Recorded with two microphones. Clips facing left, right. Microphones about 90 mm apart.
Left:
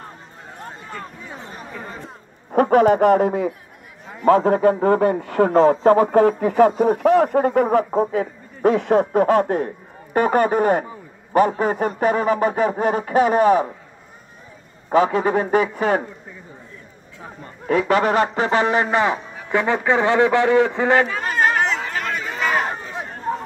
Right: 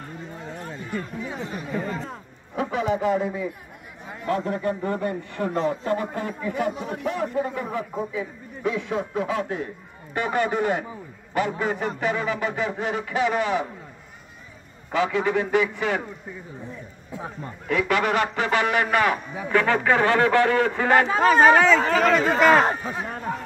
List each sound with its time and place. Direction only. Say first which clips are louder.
0.7 s a sound: right 2 dB; 40° left (ahead or behind)
2.5 s a man's voice: left 10 dB; 55° left (ahead or behind)
4.3 s a man's voice: left 11 dB; 90° left
6.8 s a man's voice: left 12 dB; 70° left (ahead or behind); by 13.7 s 40° left (ahead or behind)
14.9 s a man's voice: left 6 dB; 35° left (ahead or behind)
17.6 s a man's voice: left 5 dB; 35° left (ahead or behind)
21.8 s speech: right 7 dB; 90° right
22.3 s speech: right 2 dB; 35° right (ahead or behind)